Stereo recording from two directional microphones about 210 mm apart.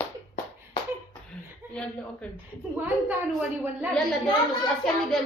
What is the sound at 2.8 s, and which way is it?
A woman's voice, 5° right (ahead or behind).